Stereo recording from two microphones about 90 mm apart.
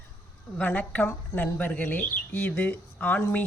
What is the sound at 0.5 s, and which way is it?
Speech, 15° left (ahead or behind).